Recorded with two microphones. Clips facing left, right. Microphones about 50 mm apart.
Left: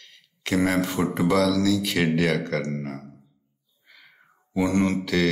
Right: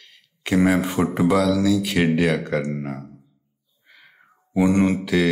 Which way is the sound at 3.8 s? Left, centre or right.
Centre.